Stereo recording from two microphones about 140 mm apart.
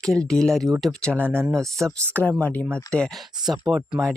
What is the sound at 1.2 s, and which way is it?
Speech, 15° right (ahead or behind).